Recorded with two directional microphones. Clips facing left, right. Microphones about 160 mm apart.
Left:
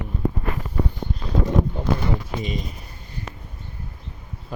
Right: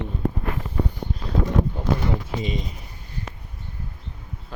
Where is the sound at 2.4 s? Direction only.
25° right (ahead or behind).